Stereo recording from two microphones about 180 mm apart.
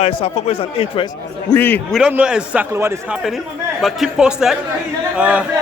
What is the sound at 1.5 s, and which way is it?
Speech, 10° left (ahead or behind).